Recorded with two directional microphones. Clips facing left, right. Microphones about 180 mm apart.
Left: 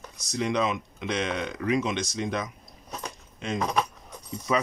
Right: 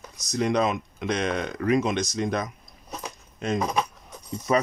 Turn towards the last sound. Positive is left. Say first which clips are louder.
# right 3 dB
turn(degrees=-45)  # may be behind; listen again after turning